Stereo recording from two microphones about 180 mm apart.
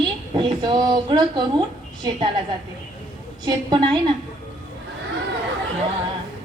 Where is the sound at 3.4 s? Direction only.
25° right (ahead or behind).